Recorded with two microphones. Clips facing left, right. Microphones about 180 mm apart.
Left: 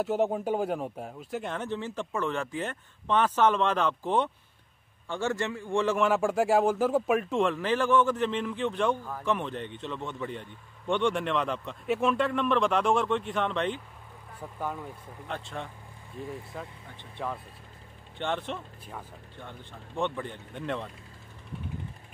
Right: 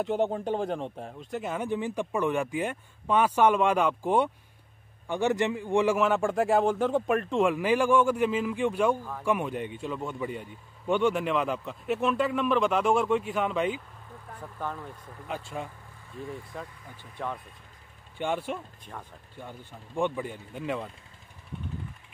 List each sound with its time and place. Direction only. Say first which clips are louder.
0.0 s speech: even; 5° left (ahead or behind); by 6.0 s 10° right (ahead or behind)
6.0 s speech: even; centre (ahead or behind)
7.4 s speech: right 3 dB; 10° right (ahead or behind)
14.4 s speech: left 1 dB; 10° left (ahead or behind)
15.3 s speech: right 1 dB; 5° right (ahead or behind)
16.5 s speech: even; centre (ahead or behind)
18.1 s speech: right 2 dB; 10° right (ahead or behind)